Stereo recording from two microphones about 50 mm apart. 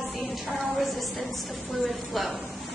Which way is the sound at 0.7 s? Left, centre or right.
Centre.